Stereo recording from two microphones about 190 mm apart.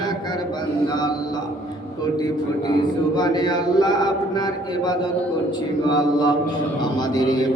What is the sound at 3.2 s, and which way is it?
Speech, 20° left (ahead or behind).